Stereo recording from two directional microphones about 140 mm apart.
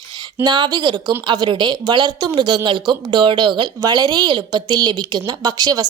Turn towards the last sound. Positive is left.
turn(degrees=-25)  # may be behind; listen again after turning